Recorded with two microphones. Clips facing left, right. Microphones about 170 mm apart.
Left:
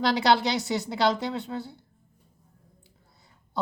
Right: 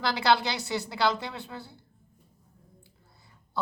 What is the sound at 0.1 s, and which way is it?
A woman's voice, 20° left (ahead or behind).